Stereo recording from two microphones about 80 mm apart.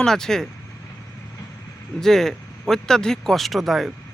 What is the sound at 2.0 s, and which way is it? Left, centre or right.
Speech, centre.